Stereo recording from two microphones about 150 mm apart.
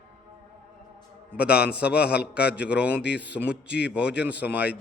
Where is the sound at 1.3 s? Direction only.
10° right (ahead or behind).